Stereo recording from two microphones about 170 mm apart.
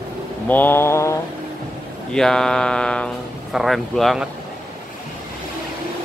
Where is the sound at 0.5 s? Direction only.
10° left (ahead or behind).